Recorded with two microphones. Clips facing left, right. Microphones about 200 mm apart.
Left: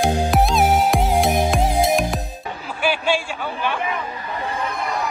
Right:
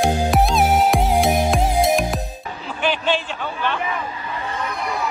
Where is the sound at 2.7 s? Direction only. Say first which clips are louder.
Even; 10° left (ahead or behind).